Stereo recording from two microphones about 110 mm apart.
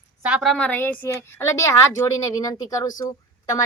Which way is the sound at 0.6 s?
20° left (ahead or behind).